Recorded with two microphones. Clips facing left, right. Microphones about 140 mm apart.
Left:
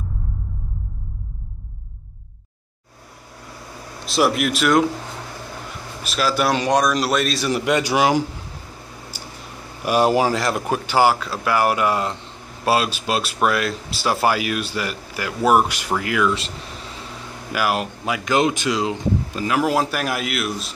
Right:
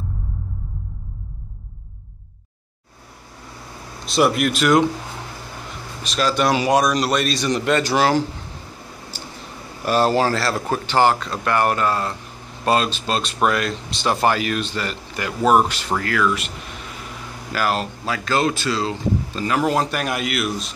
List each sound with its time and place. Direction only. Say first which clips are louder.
4.0 s a man's voice: right 1 dB; centre (ahead or behind)
6.0 s a man's voice: right 1 dB; 5° left (ahead or behind)
9.1 s a sound: right 2 dB; 10° left (ahead or behind)
9.8 s speech: left 1 dB; 15° left (ahead or behind)
16.3 s air conditioning: even; 30° left (ahead or behind)
17.5 s speech: even; 10° left (ahead or behind)